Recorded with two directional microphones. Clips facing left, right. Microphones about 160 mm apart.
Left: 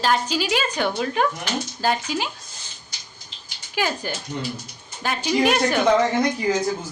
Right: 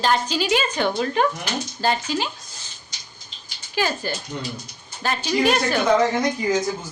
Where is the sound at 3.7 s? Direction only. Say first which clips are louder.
Right 1 dB; 10° left (ahead or behind).